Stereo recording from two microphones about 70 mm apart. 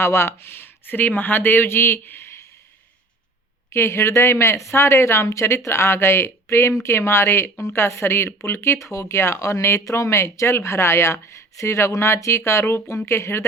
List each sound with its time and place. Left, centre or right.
0.0 s speech: left
3.7 s speech: left